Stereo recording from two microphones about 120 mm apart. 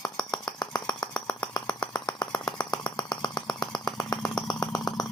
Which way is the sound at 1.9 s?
35° left (ahead or behind).